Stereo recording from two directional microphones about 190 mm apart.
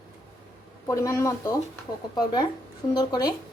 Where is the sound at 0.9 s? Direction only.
15° left (ahead or behind).